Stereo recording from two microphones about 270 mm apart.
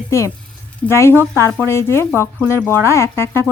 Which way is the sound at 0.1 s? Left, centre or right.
Centre.